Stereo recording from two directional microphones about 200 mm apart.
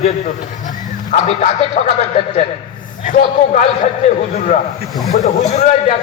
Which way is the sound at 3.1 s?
35° left (ahead or behind).